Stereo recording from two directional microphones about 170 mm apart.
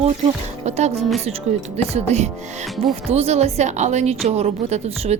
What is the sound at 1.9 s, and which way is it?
Speech, 40° right (ahead or behind).